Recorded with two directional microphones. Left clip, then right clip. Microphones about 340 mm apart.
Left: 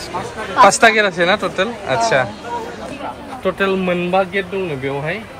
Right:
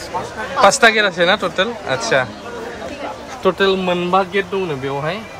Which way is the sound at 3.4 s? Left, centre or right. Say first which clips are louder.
Right 2 dB; centre.